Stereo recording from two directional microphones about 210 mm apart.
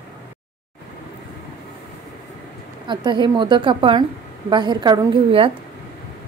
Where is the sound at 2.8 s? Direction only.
20° right (ahead or behind).